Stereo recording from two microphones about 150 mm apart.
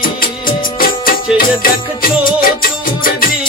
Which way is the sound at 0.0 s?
70° left (ahead or behind).